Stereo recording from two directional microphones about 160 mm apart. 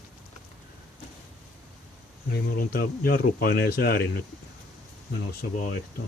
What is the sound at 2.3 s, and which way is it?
Speech, 65° left (ahead or behind).